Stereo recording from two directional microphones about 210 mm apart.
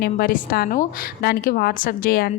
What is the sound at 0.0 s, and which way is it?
A woman's voice, 45° left (ahead or behind).